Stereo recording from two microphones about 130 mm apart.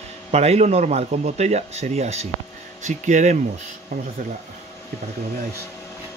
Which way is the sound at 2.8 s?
70° right (ahead or behind).